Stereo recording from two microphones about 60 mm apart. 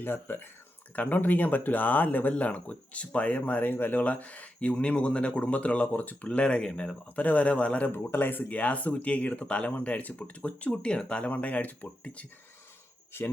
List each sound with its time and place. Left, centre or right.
0.0 s speech: left
6.2 s speech: centre
7.2 s speech: left
7.9 s speech: left
13.1 s speech: left